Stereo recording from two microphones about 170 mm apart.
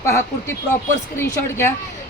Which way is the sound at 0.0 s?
15° left (ahead or behind).